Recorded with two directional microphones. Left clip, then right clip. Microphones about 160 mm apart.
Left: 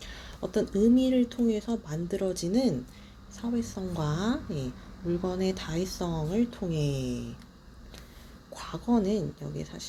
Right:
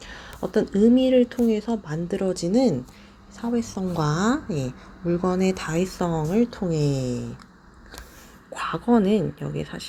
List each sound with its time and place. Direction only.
0.0 s speech: 30° right (ahead or behind)
8.5 s speech: 35° right (ahead or behind)